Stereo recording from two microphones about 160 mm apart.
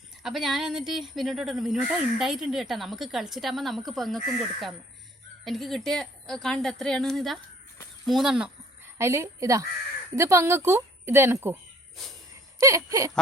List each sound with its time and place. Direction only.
0.2 s speech: centre (ahead or behind)
5.5 s speech: centre (ahead or behind)
9.0 s speech: 15° right (ahead or behind)
12.5 s speech: 20° right (ahead or behind)